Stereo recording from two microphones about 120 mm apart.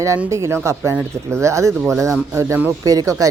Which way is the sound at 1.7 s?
Centre (ahead or behind).